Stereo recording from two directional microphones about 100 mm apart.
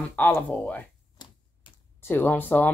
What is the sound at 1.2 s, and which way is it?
Typewriter, 45° left (ahead or behind).